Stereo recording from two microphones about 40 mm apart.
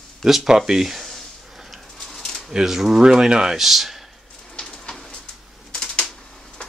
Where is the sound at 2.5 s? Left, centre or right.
Centre.